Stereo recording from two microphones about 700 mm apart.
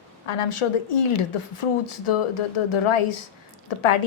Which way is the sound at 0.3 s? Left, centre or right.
Left.